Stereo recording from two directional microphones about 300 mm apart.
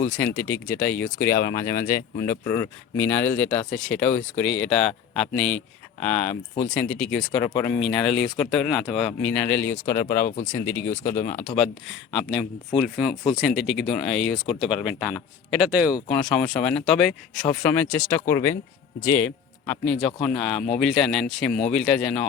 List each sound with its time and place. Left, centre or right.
0.0 s speech: centre
11.2 s speech: left
11.4 s speech: centre